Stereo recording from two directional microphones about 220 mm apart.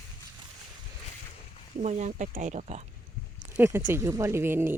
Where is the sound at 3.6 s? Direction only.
10° right (ahead or behind).